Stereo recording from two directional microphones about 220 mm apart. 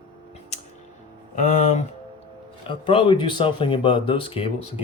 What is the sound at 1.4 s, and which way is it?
Speech, 35° left (ahead or behind).